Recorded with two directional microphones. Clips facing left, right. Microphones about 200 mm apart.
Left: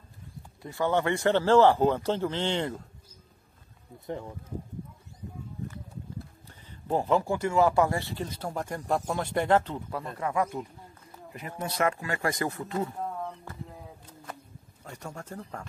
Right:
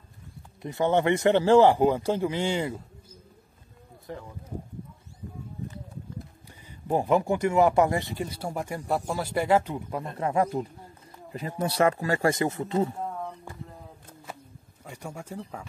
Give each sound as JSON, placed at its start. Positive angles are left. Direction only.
{"t": 0.6, "sound": "speech", "side_deg": -20}
{"t": 6.7, "sound": "speech", "side_deg": -15}
{"t": 13.0, "sound": "a sound", "side_deg": 0}
{"t": 14.9, "sound": "speech", "side_deg": -10}